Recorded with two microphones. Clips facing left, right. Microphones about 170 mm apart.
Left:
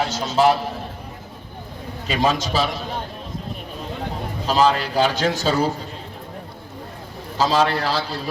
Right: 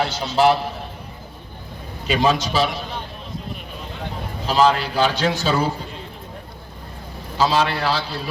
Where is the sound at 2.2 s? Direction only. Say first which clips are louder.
Right 1 dB; 45° left (ahead or behind).